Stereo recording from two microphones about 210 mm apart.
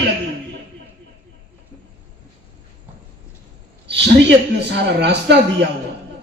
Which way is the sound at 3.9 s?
55° right (ahead or behind).